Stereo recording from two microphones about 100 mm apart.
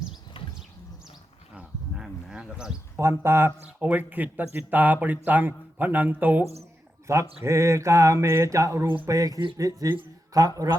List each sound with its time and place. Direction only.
1.5 s a sound: 10° right (ahead or behind)
3.0 s a man's voice: 25° right (ahead or behind)
7.1 s speech: 30° right (ahead or behind)